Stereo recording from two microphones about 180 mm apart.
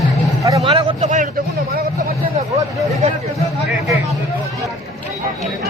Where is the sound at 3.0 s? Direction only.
35° right (ahead or behind).